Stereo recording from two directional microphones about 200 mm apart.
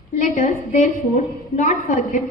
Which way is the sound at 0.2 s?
40° left (ahead or behind).